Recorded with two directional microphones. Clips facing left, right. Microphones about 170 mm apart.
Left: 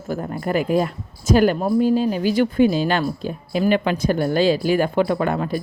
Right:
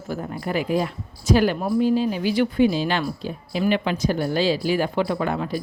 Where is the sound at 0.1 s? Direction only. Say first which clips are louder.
Left 4 dB; 50° left (ahead or behind).